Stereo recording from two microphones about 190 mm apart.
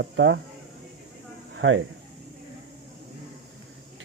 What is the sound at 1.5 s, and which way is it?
Speech, 85° right.